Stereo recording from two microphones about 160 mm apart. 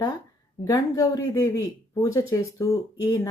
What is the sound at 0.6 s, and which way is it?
Speech, 20° left (ahead or behind).